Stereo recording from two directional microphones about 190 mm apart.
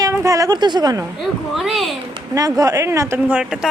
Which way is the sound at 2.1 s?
20° right (ahead or behind).